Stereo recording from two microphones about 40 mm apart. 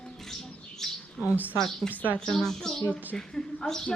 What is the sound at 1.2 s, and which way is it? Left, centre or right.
A woman's voice, centre.